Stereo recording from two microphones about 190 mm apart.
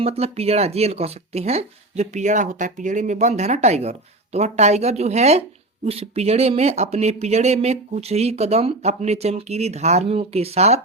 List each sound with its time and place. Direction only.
0.0 s speech: 30° right (ahead or behind)